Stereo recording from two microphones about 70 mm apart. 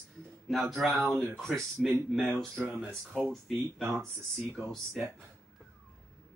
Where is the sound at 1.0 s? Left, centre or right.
Centre.